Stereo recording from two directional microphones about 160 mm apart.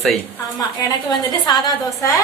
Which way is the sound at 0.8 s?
25° left (ahead or behind).